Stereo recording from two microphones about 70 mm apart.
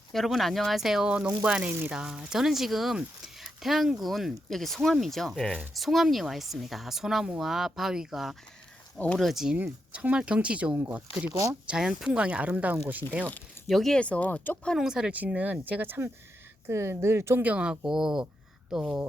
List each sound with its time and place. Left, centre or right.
0.1 s speech: centre
3.4 s a sound: centre
4.0 s speech: centre
9.9 s speech: centre
11.3 s speech: right
11.7 s speech: centre
13.7 s speech: centre
14.0 s speech: centre
14.8 s speech: centre
15.1 s speech: right
16.6 s speech: right
17.4 s speech: centre
17.9 s speech: centre